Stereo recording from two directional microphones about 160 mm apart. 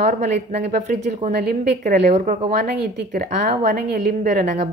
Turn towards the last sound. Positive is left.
turn(degrees=-60)  # may be behind; listen again after turning